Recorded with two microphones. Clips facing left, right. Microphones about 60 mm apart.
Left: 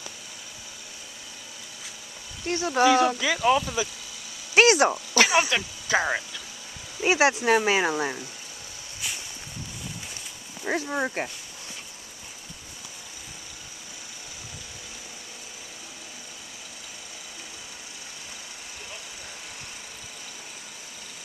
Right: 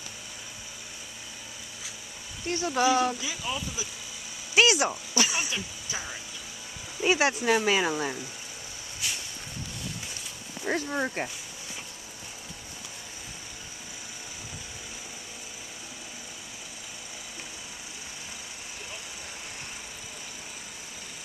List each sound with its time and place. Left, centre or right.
2.4 s speech: left
2.8 s speech: left
3.2 s speech: left
4.6 s speech: left
5.1 s speech: left
5.5 s speech: left
7.0 s speech: left
9.0 s a sound: centre
10.9 s speech: centre